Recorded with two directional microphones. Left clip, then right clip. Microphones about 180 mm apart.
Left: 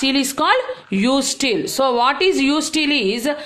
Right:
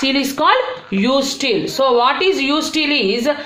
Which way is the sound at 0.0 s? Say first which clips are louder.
Right 3 dB; 50° left (ahead or behind).